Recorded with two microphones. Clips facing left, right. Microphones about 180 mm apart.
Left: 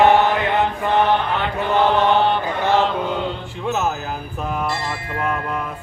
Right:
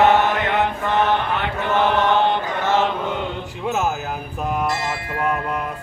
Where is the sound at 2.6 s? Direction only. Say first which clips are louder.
Left 2 dB; 15° left (ahead or behind).